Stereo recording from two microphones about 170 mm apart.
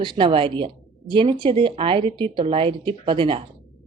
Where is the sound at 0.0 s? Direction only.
30° right (ahead or behind).